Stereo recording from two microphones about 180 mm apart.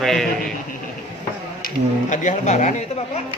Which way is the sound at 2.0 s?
40° left (ahead or behind).